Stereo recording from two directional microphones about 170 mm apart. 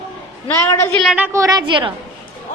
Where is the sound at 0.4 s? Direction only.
15° left (ahead or behind).